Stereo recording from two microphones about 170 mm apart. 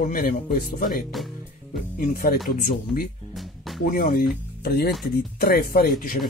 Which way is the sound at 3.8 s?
55° left (ahead or behind).